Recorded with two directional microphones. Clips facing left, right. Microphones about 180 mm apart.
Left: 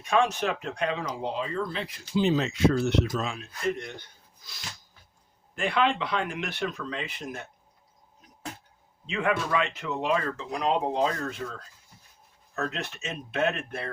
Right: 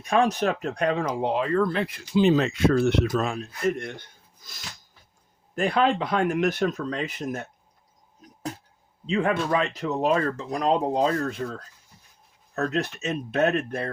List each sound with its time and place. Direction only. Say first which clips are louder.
0.0 s speech: right 3 dB; 35° right (ahead or behind); by 3.3 s 55° right (ahead or behind)
3.3 s speech: right 4 dB; 45° right (ahead or behind)
5.5 s speech: right 4 dB; 40° right (ahead or behind)
8.2 s a sound: right 8 dB; 40° right (ahead or behind)
9.0 s speech: right 4 dB; 35° right (ahead or behind)